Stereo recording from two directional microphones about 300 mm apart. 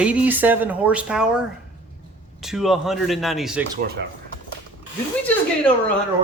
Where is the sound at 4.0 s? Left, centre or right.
Right.